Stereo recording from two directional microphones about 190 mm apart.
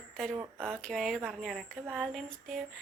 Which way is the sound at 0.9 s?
Centre (ahead or behind).